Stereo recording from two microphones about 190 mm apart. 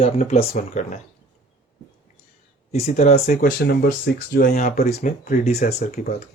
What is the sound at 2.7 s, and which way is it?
Speech, 35° left (ahead or behind).